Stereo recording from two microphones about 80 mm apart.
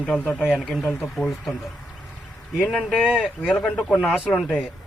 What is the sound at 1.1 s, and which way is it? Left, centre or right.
Speech, centre.